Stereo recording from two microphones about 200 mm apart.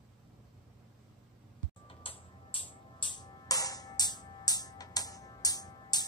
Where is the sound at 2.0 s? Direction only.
25° left (ahead or behind).